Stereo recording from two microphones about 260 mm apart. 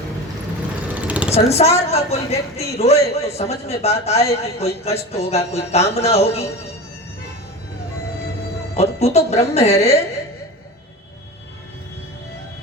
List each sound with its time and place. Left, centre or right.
0.9 s a sound: centre
1.3 s a woman's voice: left
8.7 s a woman's voice: left